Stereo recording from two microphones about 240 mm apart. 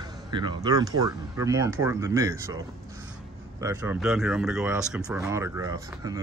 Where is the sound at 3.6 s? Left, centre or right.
Centre.